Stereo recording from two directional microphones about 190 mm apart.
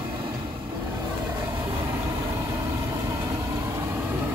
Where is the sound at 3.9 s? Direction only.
10° right (ahead or behind).